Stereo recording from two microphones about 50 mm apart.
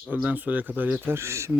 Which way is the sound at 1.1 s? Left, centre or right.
Right.